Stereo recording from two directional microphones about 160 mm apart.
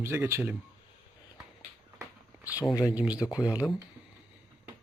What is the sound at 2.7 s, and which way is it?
Speech, 20° left (ahead or behind).